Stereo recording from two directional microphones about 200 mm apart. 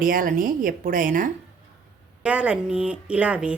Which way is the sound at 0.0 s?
45° right (ahead or behind).